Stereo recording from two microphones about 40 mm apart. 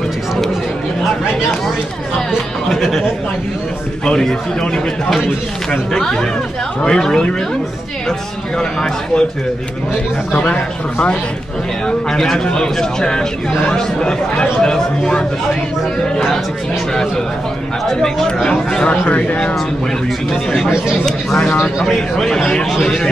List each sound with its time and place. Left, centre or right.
2.7 s speech: centre
4.0 s speech: centre
5.9 s speech: centre
8.5 s speech: centre
10.4 s speech: left
12.1 s a man's voice: centre
17.8 s speech: centre
19.0 s speech: left
22.1 s speech: centre